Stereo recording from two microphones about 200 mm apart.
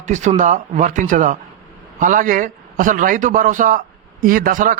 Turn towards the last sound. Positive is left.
turn(degrees=-40)  # may be behind; listen again after turning